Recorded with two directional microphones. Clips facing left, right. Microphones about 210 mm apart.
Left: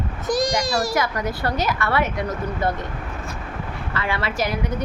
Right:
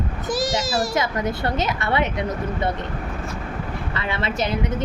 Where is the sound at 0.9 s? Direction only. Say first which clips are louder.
Even; 20° right (ahead or behind).